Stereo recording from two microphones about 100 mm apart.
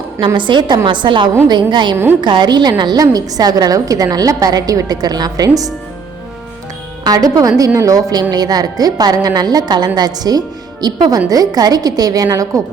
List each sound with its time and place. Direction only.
0.3 s a woman's voice: 50° right (ahead or behind)
7.0 s a woman's voice: 35° right (ahead or behind)